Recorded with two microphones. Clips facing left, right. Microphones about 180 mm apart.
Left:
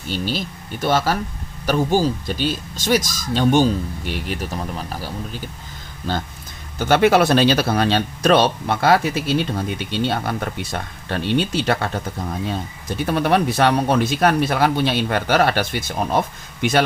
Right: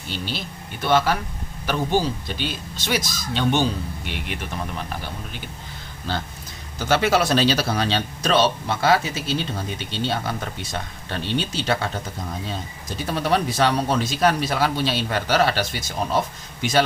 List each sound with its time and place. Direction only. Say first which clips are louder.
0.1 s speech: left 6 dB; 40° left (ahead or behind)
6.7 s speech: left 5 dB; 55° left (ahead or behind)
13.0 s speech: left 4 dB; 60° left (ahead or behind)